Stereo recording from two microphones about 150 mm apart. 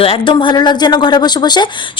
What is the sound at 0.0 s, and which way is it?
A woman's voice, 35° left (ahead or behind).